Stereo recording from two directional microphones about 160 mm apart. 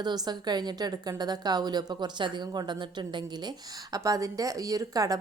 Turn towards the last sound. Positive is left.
turn(degrees=-20)  # may be behind; listen again after turning